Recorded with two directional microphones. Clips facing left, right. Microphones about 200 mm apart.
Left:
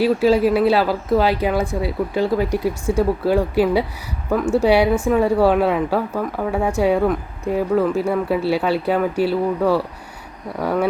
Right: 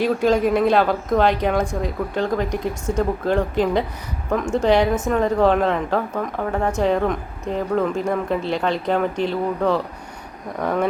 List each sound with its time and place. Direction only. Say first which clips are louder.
0.0 s speech: left 3 dB; 5° left (ahead or behind)